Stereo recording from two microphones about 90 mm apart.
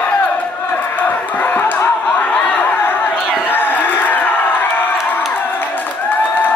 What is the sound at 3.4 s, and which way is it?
Crowd, 20° left (ahead or behind).